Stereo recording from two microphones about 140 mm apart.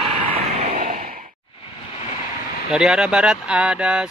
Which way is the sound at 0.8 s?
90° right.